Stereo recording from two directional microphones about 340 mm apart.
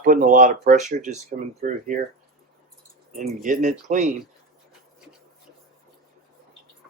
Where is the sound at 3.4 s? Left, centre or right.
Right.